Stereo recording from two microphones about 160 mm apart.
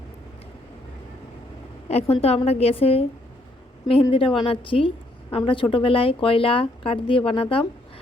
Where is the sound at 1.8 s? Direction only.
40° left (ahead or behind).